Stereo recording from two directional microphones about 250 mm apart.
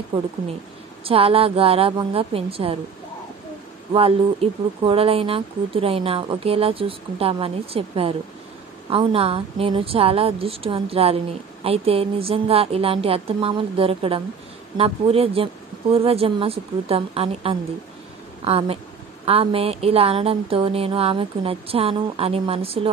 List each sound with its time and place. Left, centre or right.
1.0 s speech: right
3.9 s speech: right